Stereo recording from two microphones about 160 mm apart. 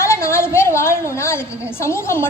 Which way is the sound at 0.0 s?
15° left (ahead or behind).